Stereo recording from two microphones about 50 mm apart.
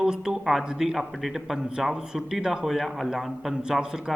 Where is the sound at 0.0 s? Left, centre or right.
Centre.